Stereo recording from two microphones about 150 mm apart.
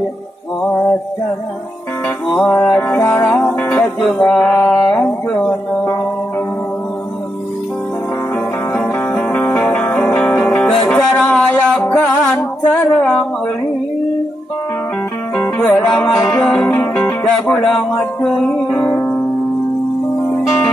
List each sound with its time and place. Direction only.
2.3 s music: 15° left (ahead or behind)
8.7 s music: 5° left (ahead or behind)
15.6 s music: 5° left (ahead or behind)
16.2 s music: 20° left (ahead or behind)